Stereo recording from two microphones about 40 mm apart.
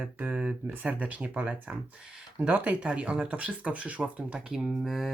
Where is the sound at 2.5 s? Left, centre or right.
Right.